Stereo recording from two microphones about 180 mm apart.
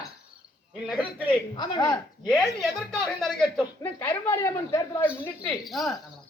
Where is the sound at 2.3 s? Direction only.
Centre (ahead or behind).